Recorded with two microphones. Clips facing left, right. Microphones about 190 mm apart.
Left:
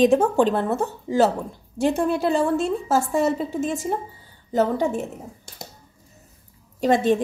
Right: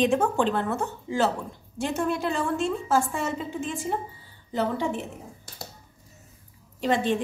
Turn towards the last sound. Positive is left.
turn(degrees=45)  # may be behind; listen again after turning